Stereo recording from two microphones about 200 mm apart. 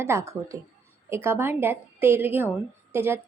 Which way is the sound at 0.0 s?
15° right (ahead or behind).